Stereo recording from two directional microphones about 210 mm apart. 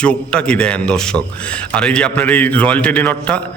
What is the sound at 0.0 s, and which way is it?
A man's voice, 5° left (ahead or behind).